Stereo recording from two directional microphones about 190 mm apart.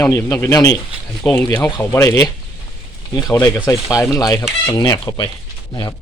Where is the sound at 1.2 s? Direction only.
5° left (ahead or behind); by 5.3 s 20° left (ahead or behind).